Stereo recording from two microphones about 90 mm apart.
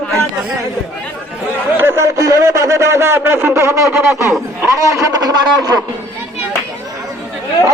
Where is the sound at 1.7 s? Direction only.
25° right (ahead or behind); by 5.7 s 40° right (ahead or behind).